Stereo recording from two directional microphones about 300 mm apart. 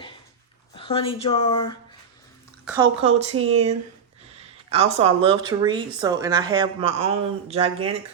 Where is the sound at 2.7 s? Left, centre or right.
Centre.